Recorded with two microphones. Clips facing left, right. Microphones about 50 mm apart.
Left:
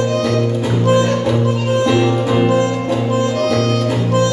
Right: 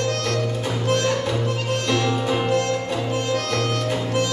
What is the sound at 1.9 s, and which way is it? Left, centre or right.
Music, centre.